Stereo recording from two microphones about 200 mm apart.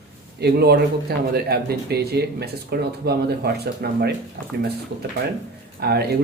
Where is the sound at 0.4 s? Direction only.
55° right (ahead or behind).